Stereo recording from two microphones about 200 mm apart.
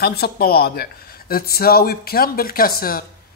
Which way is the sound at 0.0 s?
50° left (ahead or behind).